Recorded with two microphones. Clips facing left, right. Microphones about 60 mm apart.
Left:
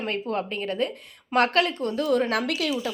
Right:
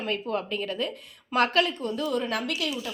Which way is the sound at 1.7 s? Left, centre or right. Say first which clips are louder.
Left 4 dB; left.